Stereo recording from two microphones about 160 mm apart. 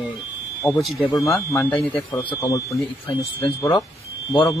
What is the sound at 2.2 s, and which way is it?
Speech, 35° left (ahead or behind).